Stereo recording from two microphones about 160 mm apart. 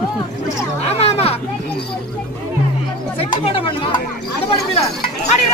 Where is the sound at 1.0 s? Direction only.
40° left (ahead or behind).